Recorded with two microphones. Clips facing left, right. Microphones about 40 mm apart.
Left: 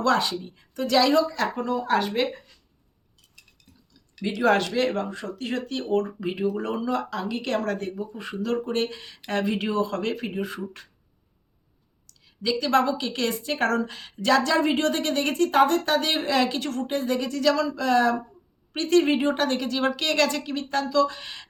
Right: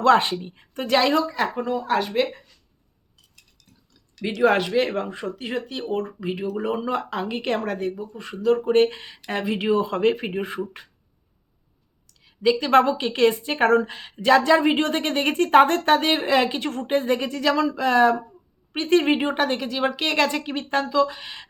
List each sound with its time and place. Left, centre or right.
0.0 s a woman's voice: right
1.4 s speech: centre
2.0 s speech: centre
4.4 s speech: centre
6.6 s speech: centre
6.8 s a woman's voice: right
7.7 s speech: centre
8.7 s a woman's voice: right
9.3 s a woman's voice: centre; by 10.6 s right
12.2 s a woman's voice: right
15.4 s a woman's voice: right
20.9 s speech: centre